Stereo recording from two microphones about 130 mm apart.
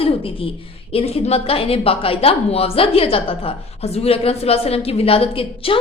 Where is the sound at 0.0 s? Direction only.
45° left (ahead or behind).